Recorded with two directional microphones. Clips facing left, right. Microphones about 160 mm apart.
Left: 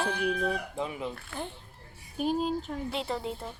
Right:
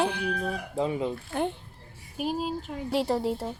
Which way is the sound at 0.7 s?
30° right (ahead or behind).